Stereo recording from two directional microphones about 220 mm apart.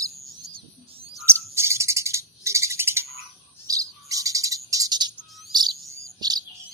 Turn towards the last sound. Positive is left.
turn(degrees=-20)  # may be behind; listen again after turning